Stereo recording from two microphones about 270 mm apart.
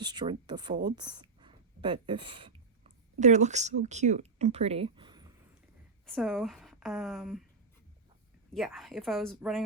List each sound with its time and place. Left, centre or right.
0.0 s speech: centre
6.1 s a woman's voice: centre
8.5 s a woman's voice: centre